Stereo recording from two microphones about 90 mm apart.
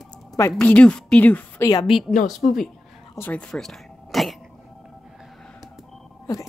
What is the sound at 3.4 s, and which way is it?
Throat clearing, 5° left (ahead or behind).